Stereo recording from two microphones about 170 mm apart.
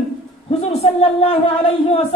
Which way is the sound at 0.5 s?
35° left (ahead or behind).